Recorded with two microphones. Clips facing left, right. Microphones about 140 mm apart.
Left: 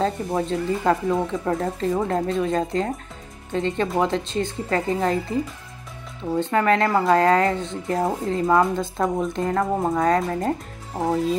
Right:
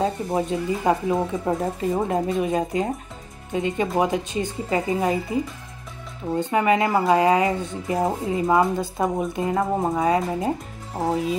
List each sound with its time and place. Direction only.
0.0 s speech: 15° right (ahead or behind)
6.4 s speech: 10° right (ahead or behind)